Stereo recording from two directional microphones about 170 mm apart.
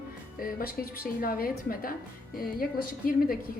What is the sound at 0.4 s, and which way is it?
A woman's voice, 60° left (ahead or behind).